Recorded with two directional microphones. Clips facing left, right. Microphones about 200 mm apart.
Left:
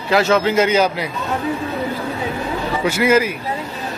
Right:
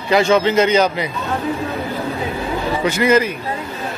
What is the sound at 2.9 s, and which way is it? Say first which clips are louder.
Speech: even; 5° left (ahead or behind).